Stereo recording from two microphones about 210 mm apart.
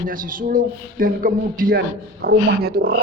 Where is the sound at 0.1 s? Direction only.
40° right (ahead or behind).